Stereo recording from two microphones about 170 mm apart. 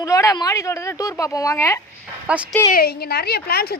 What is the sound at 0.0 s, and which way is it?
A woman's voice, 20° left (ahead or behind).